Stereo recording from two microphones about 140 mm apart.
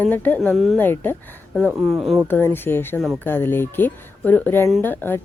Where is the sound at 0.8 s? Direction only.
15° left (ahead or behind).